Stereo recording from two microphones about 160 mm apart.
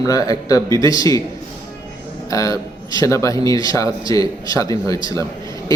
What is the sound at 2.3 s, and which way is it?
A man's voice, 20° left (ahead or behind).